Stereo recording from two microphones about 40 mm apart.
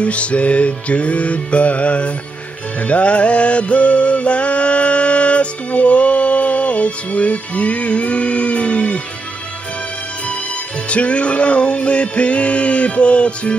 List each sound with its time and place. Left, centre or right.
0.0 s music: left
10.9 s music: left